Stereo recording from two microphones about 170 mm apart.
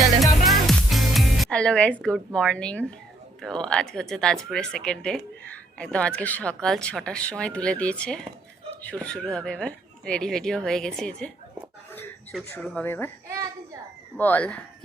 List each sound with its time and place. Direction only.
0.2 s music: centre (ahead or behind)
3.4 s speech: 5° left (ahead or behind)
12.3 s speech: 5° left (ahead or behind)
13.2 s a sound: 15° right (ahead or behind)
14.2 s speech: 10° left (ahead or behind)